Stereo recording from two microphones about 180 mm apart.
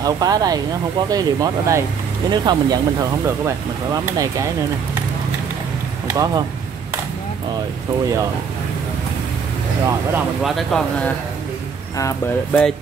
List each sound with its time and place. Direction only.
0.0 s speech: 20° right (ahead or behind)
6.1 s speech: 20° right (ahead or behind)
10.1 s speech: centre (ahead or behind)
12.0 s speech: 20° left (ahead or behind)